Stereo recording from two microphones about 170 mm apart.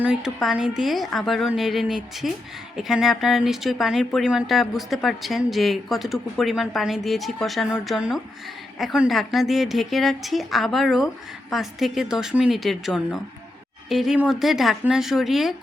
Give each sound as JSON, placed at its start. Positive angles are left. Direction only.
{"t": 0.0, "sound": "speech", "side_deg": -5}